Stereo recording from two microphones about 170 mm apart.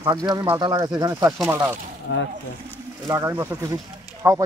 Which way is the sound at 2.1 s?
90° left.